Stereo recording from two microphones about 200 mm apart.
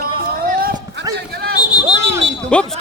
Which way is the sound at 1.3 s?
50° right (ahead or behind).